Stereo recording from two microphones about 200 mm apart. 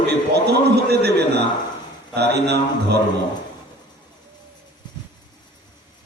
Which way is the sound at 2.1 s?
55° right (ahead or behind).